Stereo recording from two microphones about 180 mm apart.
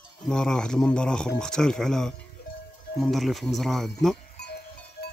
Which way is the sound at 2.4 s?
65° left (ahead or behind).